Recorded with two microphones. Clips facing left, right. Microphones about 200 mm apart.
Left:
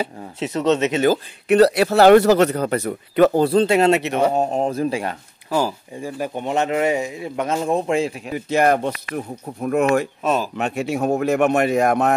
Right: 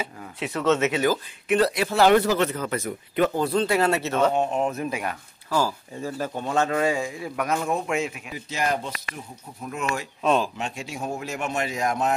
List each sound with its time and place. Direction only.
0.0 s speech: 25° left (ahead or behind)
1.6 s speech: 70° left (ahead or behind)
2.7 s speech: 65° left (ahead or behind)
3.3 s speech: 30° left (ahead or behind); by 4.3 s 15° left (ahead or behind)
4.3 s speech: 35° left (ahead or behind)
5.6 s speech: 15° left (ahead or behind); by 8.1 s 30° left (ahead or behind)
8.3 s speech: 60° left (ahead or behind)
10.2 s speech: 5° left (ahead or behind)
10.6 s speech: 60° left (ahead or behind)